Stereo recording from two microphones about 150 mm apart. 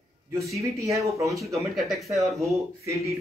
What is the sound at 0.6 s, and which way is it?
Speech, 20° right (ahead or behind).